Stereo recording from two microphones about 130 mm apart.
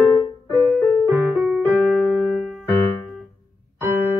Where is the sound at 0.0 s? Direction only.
20° left (ahead or behind).